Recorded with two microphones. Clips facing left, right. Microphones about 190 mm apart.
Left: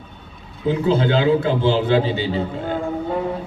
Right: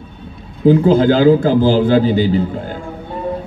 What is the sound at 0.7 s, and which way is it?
A man's voice, 40° right (ahead or behind).